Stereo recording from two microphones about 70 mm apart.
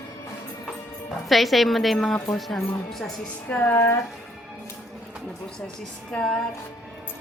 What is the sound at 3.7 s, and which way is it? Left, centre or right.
Speech, left.